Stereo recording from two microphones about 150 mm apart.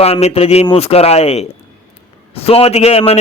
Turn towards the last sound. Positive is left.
turn(degrees=40)  # may be behind; listen again after turning